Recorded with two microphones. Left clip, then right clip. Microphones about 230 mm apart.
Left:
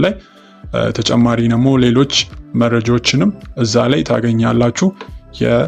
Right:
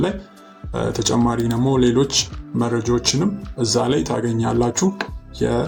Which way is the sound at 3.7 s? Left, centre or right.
Left.